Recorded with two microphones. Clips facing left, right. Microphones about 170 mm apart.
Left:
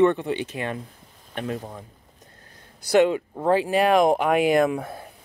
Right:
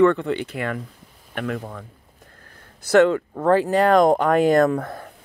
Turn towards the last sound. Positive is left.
turn(degrees=25)  # may be behind; listen again after turning